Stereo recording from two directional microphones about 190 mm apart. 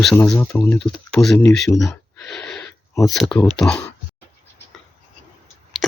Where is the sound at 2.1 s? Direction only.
5° left (ahead or behind).